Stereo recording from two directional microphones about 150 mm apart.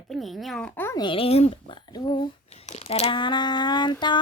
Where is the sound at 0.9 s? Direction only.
35° left (ahead or behind).